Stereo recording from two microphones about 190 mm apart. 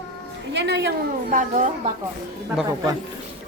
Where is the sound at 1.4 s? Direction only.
40° right (ahead or behind).